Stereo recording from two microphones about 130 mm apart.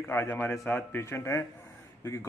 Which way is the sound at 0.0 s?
20° left (ahead or behind).